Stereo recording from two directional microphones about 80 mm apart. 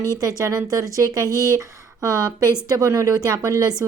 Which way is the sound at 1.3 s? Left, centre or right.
Left.